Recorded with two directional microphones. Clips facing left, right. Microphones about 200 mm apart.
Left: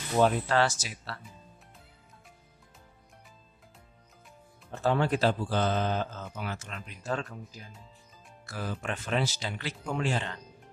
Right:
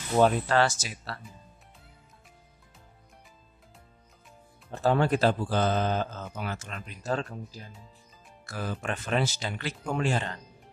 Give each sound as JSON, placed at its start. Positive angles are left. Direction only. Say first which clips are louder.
{"t": 0.2, "sound": "speech", "louder": "right 2 dB", "side_deg": -50}
{"t": 4.8, "sound": "speech", "louder": "right 2 dB", "side_deg": -45}
{"t": 8.5, "sound": "speech", "louder": "right 2 dB", "side_deg": -50}